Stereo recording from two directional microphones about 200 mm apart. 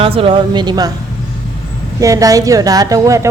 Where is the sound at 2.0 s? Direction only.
15° right (ahead or behind).